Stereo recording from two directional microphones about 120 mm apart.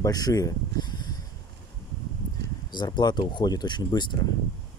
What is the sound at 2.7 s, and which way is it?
Speech, 40° left (ahead or behind).